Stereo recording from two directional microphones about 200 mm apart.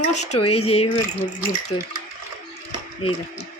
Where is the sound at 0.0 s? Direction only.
35° left (ahead or behind).